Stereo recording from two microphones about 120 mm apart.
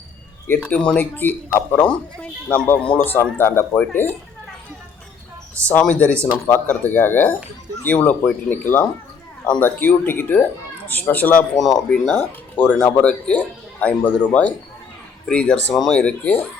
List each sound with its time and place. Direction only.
0.4 s speech: 15° left (ahead or behind)
5.5 s speech: 10° left (ahead or behind)
11.5 s speech: centre (ahead or behind)
15.3 s speech: 10° left (ahead or behind)